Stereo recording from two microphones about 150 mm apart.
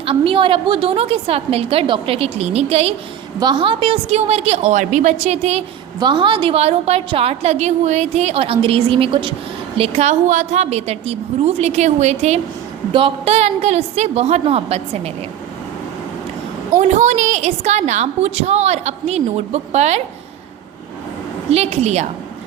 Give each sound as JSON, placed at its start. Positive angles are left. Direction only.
{"t": 0.0, "sound": "a woman's voice", "side_deg": -35}
{"t": 3.4, "sound": "a woman's voice", "side_deg": -35}
{"t": 6.0, "sound": "a woman's voice", "side_deg": -30}
{"t": 12.9, "sound": "a woman's voice", "side_deg": -35}
{"t": 16.9, "sound": "a woman's voice", "side_deg": -50}
{"t": 21.5, "sound": "a woman's voice", "side_deg": -45}